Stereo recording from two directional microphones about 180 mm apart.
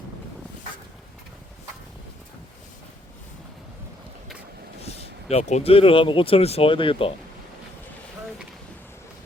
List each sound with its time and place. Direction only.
4.8 s speech: 35° left (ahead or behind)